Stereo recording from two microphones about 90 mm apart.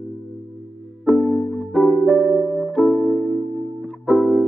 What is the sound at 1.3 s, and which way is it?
Music, 5° left (ahead or behind).